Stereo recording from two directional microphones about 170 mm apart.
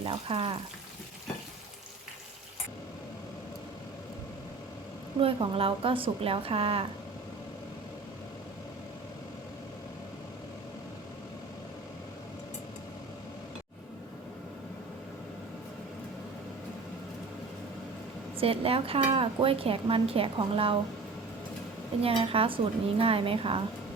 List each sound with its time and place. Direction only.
0.0 s speech: 30° right (ahead or behind)
5.2 s speech: 35° right (ahead or behind)
18.3 s speech: 35° right (ahead or behind)
22.0 s speech: 35° right (ahead or behind)